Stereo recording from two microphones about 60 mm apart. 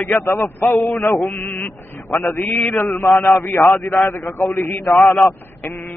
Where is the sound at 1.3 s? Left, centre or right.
Left.